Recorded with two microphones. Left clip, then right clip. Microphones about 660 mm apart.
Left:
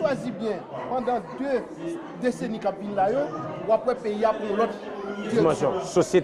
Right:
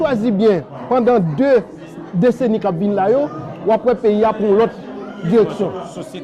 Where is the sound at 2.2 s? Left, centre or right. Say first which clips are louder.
Right 14 dB; right.